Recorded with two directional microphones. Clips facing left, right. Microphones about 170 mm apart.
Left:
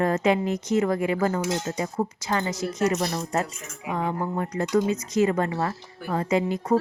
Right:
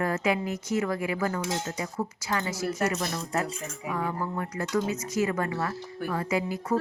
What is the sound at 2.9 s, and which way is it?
Speech, 35° left (ahead or behind).